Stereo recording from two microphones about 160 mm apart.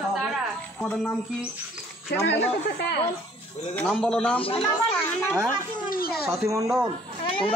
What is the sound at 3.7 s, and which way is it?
A man's voice, 10° left (ahead or behind).